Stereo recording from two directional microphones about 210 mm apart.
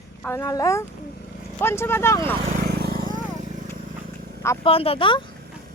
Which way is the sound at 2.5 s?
50° right (ahead or behind).